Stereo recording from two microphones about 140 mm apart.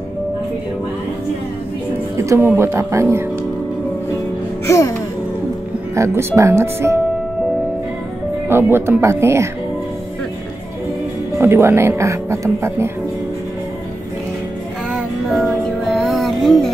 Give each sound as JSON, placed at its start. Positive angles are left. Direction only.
{"t": 2.1, "sound": "speech", "side_deg": -20}
{"t": 4.6, "sound": "music", "side_deg": 20}
{"t": 5.9, "sound": "speech", "side_deg": -20}
{"t": 8.5, "sound": "speech", "side_deg": -15}
{"t": 11.3, "sound": "speech", "side_deg": -20}
{"t": 14.9, "sound": "music", "side_deg": 0}